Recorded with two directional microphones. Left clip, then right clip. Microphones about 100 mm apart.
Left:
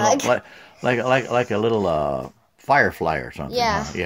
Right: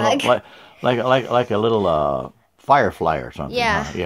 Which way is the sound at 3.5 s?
15° right (ahead or behind).